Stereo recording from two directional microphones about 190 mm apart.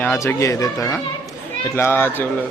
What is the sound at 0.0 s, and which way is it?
Speech, 10° left (ahead or behind).